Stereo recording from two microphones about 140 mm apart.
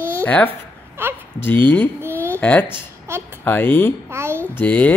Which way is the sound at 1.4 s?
15° left (ahead or behind).